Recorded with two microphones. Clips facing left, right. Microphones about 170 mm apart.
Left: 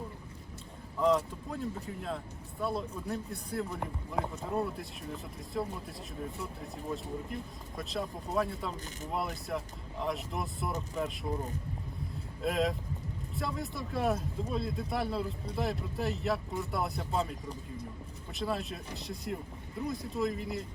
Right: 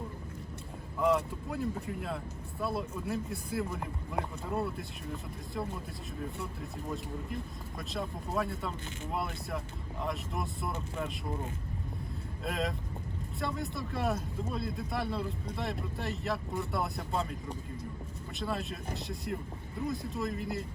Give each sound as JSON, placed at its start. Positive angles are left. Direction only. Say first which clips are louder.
{"t": 0.9, "sound": "speech", "louder": "left 1 dB", "side_deg": -5}
{"t": 12.4, "sound": "speech", "louder": "left 4 dB", "side_deg": 0}
{"t": 18.3, "sound": "speech", "louder": "left 1 dB", "side_deg": 0}